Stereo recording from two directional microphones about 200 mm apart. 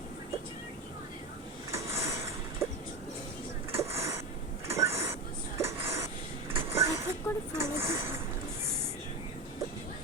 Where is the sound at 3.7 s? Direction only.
15° right (ahead or behind).